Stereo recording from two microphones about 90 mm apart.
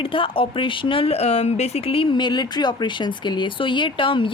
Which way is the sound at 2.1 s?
55° left (ahead or behind).